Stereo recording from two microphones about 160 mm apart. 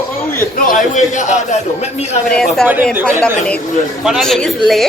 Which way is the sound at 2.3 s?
Centre (ahead or behind).